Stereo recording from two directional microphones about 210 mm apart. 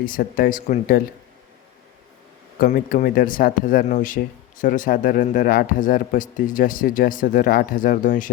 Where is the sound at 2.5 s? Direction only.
40° left (ahead or behind).